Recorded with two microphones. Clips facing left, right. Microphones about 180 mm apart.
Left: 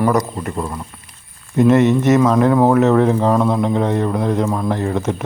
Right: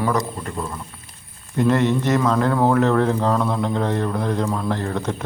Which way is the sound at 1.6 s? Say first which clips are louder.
Left 6 dB; 20° left (ahead or behind).